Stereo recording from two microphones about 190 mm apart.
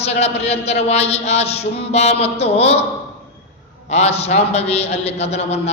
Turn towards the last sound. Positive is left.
turn(degrees=35)  # may be behind; listen again after turning